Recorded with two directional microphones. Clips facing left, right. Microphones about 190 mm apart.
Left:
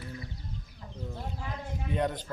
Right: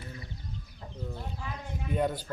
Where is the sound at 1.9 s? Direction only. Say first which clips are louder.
Right 1 dB; 5° right (ahead or behind).